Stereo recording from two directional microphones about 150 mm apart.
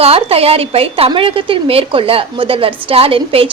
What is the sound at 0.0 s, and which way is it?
A woman's voice, 40° right (ahead or behind).